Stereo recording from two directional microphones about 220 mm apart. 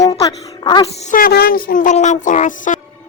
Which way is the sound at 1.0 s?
35° left (ahead or behind).